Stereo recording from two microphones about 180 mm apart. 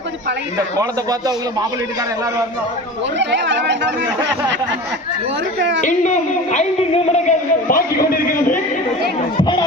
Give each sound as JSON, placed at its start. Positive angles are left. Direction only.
{"t": 3.2, "sound": "speech", "side_deg": -80}
{"t": 5.5, "sound": "a woman's voice", "side_deg": -75}
{"t": 5.8, "sound": "a man's voice", "side_deg": 40}
{"t": 9.4, "sound": "speech", "side_deg": 25}